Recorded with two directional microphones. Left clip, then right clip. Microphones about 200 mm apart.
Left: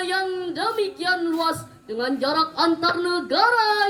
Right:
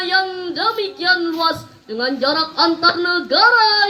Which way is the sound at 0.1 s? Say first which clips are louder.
Right 6 dB; 50° left (ahead or behind).